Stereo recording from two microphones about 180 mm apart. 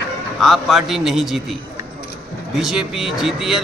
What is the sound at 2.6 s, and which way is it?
A man's voice, centre (ahead or behind).